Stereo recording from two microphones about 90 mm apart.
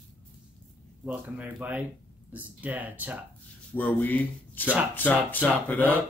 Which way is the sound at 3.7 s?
20° left (ahead or behind).